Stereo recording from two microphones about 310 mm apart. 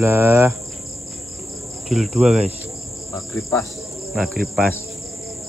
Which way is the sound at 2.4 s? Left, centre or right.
Centre.